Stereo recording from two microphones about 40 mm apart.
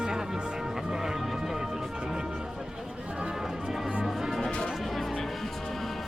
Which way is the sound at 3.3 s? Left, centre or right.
Centre.